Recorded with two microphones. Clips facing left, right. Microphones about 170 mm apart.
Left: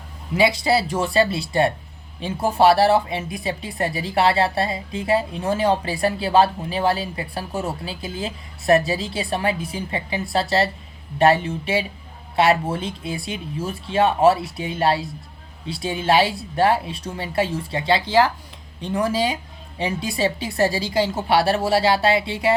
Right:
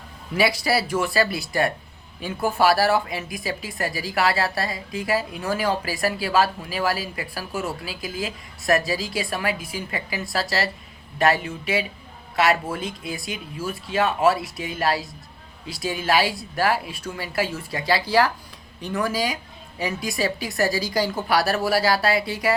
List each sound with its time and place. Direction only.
0.3 s speech: 20° left (ahead or behind)